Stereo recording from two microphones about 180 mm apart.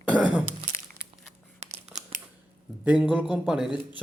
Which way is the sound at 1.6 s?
40° right (ahead or behind).